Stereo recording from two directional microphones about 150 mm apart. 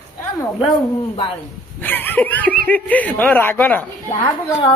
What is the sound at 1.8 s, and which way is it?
Speech, 10° left (ahead or behind).